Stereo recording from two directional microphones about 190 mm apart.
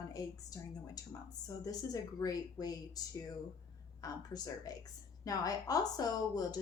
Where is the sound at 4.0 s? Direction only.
20° left (ahead or behind).